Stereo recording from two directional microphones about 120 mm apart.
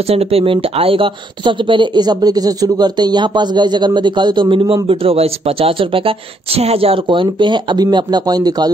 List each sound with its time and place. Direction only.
0.1 s speech: 55° right (ahead or behind); by 8.7 s 35° right (ahead or behind)